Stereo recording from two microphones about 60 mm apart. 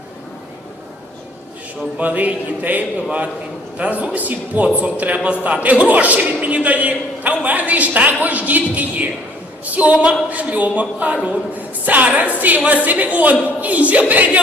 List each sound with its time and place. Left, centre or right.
2.0 s a man's voice: right